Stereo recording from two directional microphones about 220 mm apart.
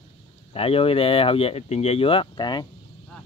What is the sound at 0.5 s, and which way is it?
Speech, 25° left (ahead or behind).